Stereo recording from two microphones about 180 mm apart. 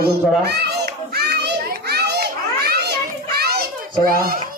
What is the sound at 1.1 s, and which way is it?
Children playing, 65° right (ahead or behind).